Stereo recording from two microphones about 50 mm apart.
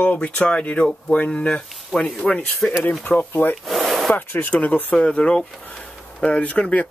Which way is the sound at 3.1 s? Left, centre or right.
Left.